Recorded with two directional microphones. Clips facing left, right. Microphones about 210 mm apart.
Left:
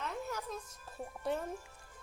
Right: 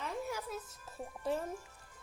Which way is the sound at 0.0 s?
10° right (ahead or behind).